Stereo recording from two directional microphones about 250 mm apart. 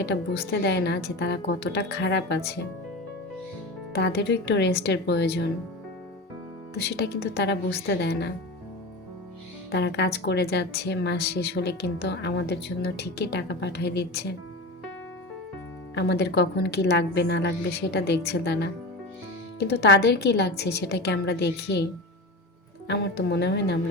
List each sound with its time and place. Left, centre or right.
0.0 s a woman's voice: left
3.9 s a woman's voice: left
6.7 s a woman's voice: left
9.7 s a woman's voice: left
16.0 s a woman's voice: left
22.9 s a woman's voice: left